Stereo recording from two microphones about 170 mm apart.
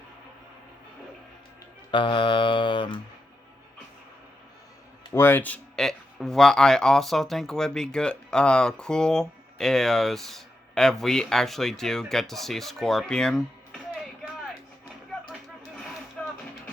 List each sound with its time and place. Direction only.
1.9 s mantra: 30° left (ahead or behind)
5.1 s speech: 15° left (ahead or behind)
16.2 s music: 5° left (ahead or behind)